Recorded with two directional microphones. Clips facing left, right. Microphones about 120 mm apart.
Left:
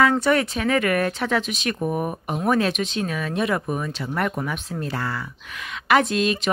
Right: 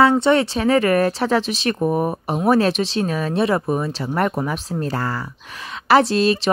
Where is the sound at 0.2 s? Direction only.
25° right (ahead or behind).